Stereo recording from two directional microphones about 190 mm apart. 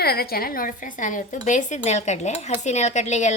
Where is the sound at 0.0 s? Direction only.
55° left (ahead or behind).